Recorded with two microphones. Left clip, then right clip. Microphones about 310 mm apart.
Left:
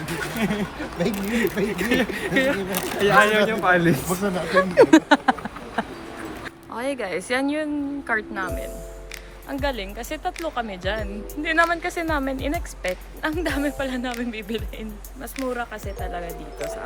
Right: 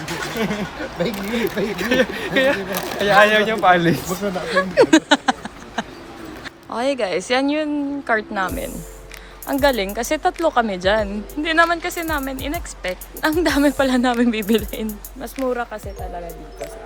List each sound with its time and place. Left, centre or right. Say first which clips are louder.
1.0 s a woman's voice: right 1 dB; centre
4.1 s a woman's voice: right 1 dB; centre
13.3 s a woman's voice: right 9 dB; centre
15.5 s speech: right 3 dB; centre